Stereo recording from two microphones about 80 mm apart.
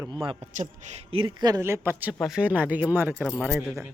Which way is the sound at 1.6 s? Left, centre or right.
Right.